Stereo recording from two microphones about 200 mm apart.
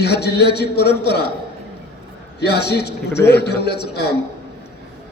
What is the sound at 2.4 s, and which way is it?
A man's voice, 55° left (ahead or behind).